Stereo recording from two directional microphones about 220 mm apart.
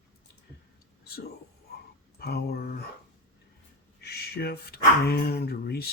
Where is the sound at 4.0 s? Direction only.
45° left (ahead or behind).